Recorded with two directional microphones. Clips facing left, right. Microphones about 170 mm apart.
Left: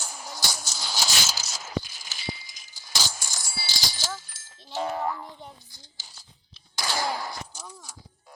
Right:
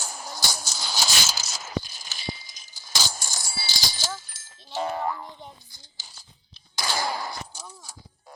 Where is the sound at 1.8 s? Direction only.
35° right (ahead or behind).